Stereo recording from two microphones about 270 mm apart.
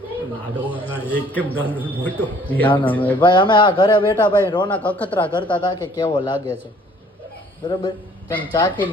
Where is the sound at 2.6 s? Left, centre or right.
Centre.